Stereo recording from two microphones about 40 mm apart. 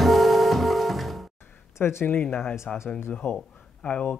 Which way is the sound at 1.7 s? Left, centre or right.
Left.